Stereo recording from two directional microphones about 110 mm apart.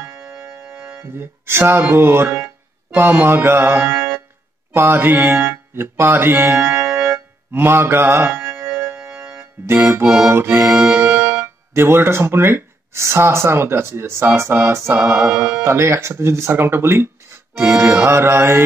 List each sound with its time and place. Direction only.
0.2 s music: 5° right (ahead or behind)
1.1 s speech: 20° right (ahead or behind)
6.6 s music: 10° right (ahead or behind)
7.1 s music: 20° right (ahead or behind)
8.5 s music: 10° right (ahead or behind)
9.7 s speech: 20° right (ahead or behind)
11.1 s music: 10° right (ahead or behind)
11.4 s speech: 20° right (ahead or behind)
15.3 s speech: 10° right (ahead or behind)
15.6 s speech: 25° right (ahead or behind)